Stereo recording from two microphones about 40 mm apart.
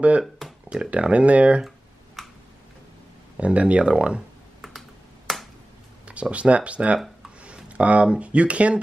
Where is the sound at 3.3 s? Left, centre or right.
Right.